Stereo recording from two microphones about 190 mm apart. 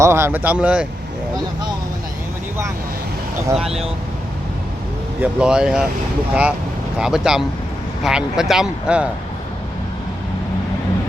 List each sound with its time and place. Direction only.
0.0 s speech: 15° right (ahead or behind)
3.5 s speech: centre (ahead or behind)
5.2 s speech: 5° right (ahead or behind)
7.0 s speech: 5° right (ahead or behind)